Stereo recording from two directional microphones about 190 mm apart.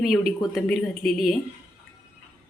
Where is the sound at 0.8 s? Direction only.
Centre (ahead or behind).